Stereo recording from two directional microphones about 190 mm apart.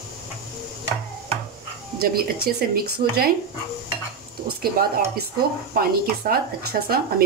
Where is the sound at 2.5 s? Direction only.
50° right (ahead or behind).